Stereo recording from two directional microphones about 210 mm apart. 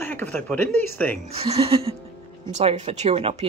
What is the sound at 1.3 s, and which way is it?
Speech, 30° right (ahead or behind).